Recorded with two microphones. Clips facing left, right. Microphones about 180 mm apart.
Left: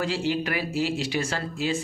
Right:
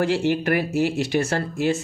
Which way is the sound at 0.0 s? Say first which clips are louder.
Right 5 dB; 55° right (ahead or behind).